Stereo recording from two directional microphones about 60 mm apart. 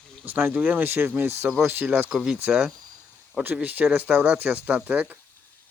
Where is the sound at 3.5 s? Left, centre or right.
Right.